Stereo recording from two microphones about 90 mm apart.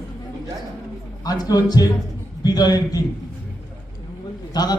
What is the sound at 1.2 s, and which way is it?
A man's voice, 45° left (ahead or behind).